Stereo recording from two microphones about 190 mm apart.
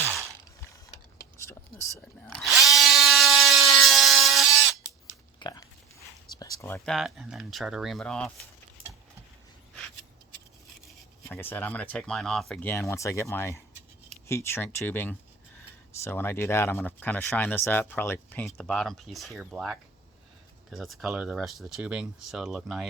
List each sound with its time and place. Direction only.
2.0 s ratchet: 5° left (ahead or behind)
5.4 s a sound: 20° left (ahead or behind)
6.8 s speech: centre (ahead or behind)
11.3 s speech: 10° left (ahead or behind)